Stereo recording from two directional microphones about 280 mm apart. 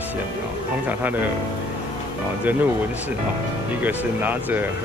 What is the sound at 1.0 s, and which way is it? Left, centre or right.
Speech, centre.